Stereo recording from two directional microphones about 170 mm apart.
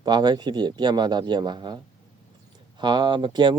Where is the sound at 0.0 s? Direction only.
25° right (ahead or behind).